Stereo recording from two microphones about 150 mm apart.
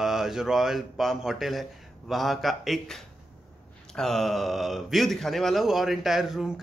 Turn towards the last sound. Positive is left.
turn(degrees=0)  # may be behind; listen again after turning